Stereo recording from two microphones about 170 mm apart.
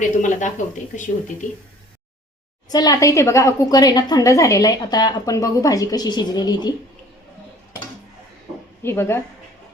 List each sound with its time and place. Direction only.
0.2 s speech: 45° left (ahead or behind)
2.6 s a woman's voice: 20° left (ahead or behind)
8.8 s a woman's voice: 15° left (ahead or behind)